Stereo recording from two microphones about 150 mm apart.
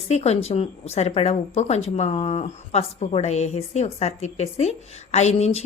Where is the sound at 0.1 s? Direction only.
45° left (ahead or behind).